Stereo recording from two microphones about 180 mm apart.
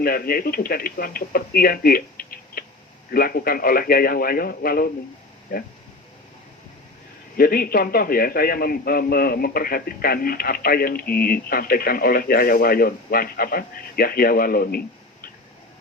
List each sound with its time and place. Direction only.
0.0 s a man's voice: 55° left (ahead or behind)
7.3 s a man's voice: 55° left (ahead or behind)